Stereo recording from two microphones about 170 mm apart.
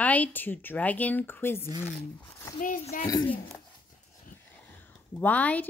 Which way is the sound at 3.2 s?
10° left (ahead or behind).